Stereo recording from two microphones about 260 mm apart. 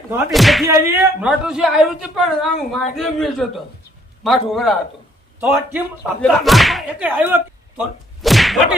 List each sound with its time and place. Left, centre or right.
0.1 s a woman's voice: centre
8.2 s whip: centre